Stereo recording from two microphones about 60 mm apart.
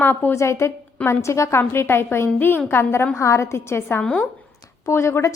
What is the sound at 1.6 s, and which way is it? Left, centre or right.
A woman's voice, left.